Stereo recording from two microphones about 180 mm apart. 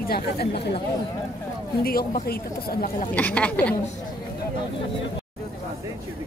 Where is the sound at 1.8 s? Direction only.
55° left (ahead or behind).